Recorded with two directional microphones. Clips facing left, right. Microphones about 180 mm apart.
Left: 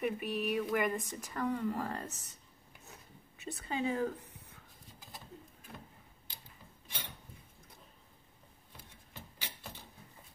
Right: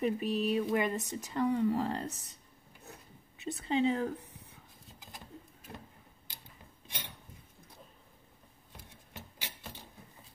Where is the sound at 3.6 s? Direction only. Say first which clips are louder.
Right 4 dB; 20° right (ahead or behind).